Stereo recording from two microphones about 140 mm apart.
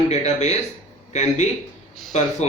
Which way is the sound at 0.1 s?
50° left (ahead or behind).